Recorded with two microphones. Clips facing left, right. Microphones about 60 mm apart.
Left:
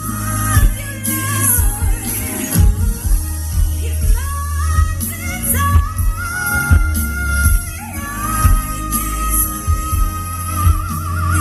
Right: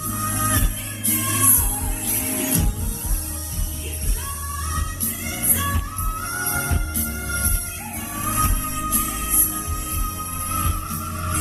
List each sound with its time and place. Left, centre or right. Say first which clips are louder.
0.0 s music: left 3 dB; left
5.0 s music: left 5 dB; left
8.0 s music: left 5 dB; left